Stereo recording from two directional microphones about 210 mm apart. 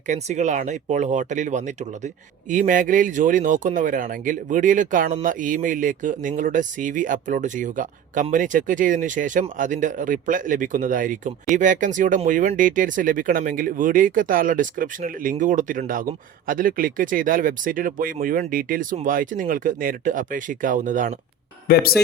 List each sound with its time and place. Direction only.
0.1 s speech: 35° right (ahead or behind)
21.7 s speech: 45° left (ahead or behind)